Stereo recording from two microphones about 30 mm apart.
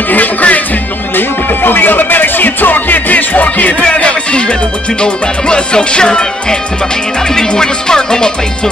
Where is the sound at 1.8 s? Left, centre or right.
Left.